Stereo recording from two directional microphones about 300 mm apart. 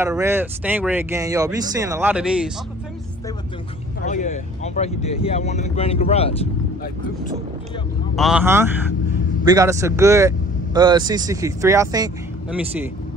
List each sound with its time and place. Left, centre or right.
0.0 s speech: centre
4.0 s speech: left
8.2 s speech: centre